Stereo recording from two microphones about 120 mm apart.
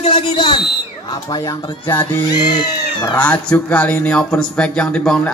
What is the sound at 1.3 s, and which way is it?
Speech, 30° left (ahead or behind).